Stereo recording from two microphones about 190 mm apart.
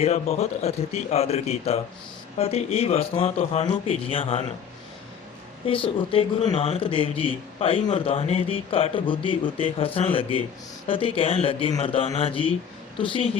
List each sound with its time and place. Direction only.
0.0 s speech: 35° left (ahead or behind)
5.6 s speech: 30° left (ahead or behind)